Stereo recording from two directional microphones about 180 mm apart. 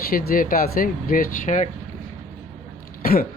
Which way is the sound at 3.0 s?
55° left (ahead or behind).